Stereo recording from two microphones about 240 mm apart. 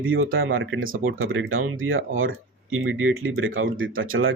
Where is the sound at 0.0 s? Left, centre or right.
Right.